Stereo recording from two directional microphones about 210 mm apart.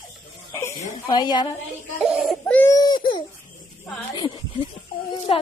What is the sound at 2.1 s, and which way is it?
Baby cry, centre (ahead or behind).